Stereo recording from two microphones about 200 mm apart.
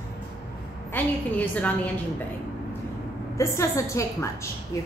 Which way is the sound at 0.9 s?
10° left (ahead or behind).